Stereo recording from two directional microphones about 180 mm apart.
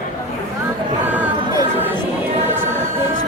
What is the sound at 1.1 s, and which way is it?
Music, 10° right (ahead or behind).